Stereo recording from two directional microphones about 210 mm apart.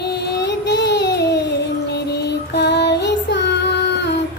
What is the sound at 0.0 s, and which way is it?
Child singing, 50° left (ahead or behind).